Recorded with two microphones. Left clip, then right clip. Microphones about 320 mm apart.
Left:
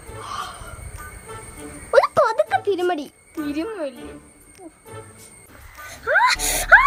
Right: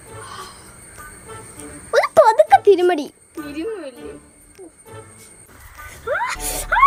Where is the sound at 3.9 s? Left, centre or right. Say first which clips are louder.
Right 3 dB; centre.